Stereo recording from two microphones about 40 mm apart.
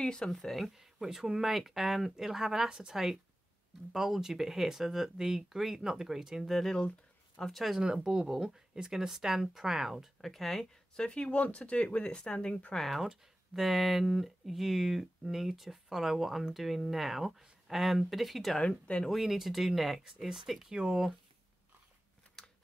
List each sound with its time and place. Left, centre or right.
0.0 s speech: left
0.7 s speech: centre
6.6 s speech: centre
7.8 s speech: right
10.2 s speech: centre
11.0 s speech: left
12.7 s speech: centre
18.6 s speech: left
19.0 s speech: centre
20.7 s speech: centre
22.4 s a sound: centre